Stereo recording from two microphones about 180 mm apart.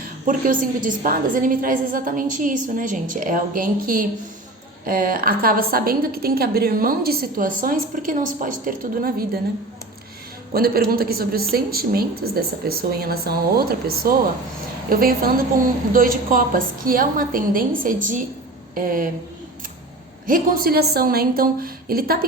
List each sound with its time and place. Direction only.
0.3 s a woman's voice: 50° right (ahead or behind)
10.5 s a woman's voice: 55° right (ahead or behind)
20.2 s a woman's voice: 55° right (ahead or behind)